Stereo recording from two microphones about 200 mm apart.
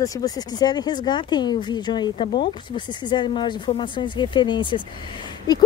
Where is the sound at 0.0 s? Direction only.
15° left (ahead or behind).